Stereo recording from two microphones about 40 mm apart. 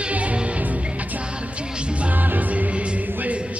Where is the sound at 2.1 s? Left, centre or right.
Right.